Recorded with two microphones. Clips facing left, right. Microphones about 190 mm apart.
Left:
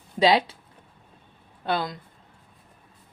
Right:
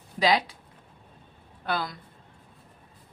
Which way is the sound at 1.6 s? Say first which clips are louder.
Left 3 dB; 25° left (ahead or behind).